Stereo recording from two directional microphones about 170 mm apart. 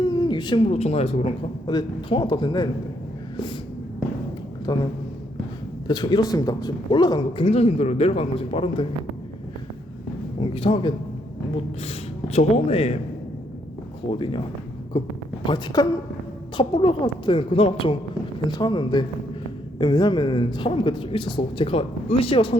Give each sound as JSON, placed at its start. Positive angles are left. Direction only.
{"t": 0.0, "sound": "speech", "side_deg": 25}
{"t": 4.6, "sound": "a man's voice", "side_deg": 25}
{"t": 5.9, "sound": "speech", "side_deg": 25}
{"t": 10.4, "sound": "speech", "side_deg": 35}
{"t": 14.1, "sound": "speech", "side_deg": 30}
{"t": 15.4, "sound": "speech", "side_deg": 25}